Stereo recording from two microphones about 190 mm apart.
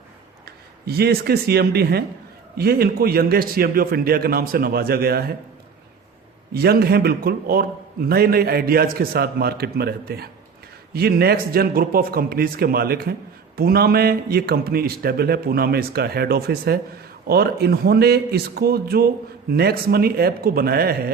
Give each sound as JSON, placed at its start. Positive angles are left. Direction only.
{"t": 0.4, "sound": "a man's voice", "side_deg": -55}
{"t": 6.5, "sound": "a man's voice", "side_deg": -55}